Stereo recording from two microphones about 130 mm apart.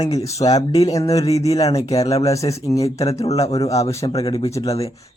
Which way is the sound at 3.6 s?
25° left (ahead or behind).